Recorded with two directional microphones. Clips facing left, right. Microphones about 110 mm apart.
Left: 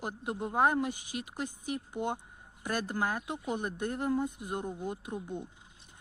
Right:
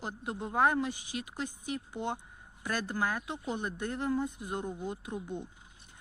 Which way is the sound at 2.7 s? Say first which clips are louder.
Even; 25° left (ahead or behind).